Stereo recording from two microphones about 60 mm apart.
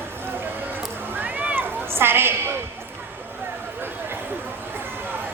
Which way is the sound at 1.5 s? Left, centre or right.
Right.